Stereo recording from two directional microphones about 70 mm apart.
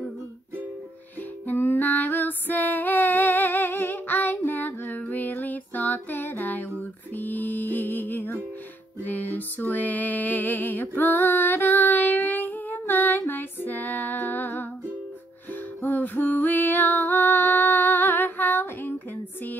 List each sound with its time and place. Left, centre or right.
1.5 s female singing: left
7.2 s music: left
15.8 s female singing: left